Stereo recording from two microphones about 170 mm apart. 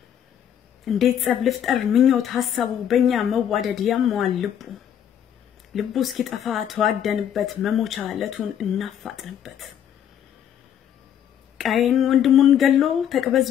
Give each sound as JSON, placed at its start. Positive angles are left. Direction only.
{"t": 0.8, "sound": "speech", "side_deg": 0}
{"t": 11.5, "sound": "speech", "side_deg": 0}